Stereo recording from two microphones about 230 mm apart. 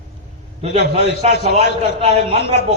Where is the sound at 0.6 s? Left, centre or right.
Right.